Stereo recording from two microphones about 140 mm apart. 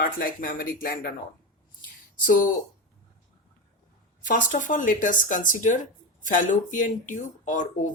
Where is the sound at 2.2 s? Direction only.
75° left (ahead or behind).